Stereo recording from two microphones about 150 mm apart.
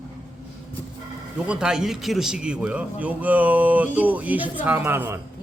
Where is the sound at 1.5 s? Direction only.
5° right (ahead or behind).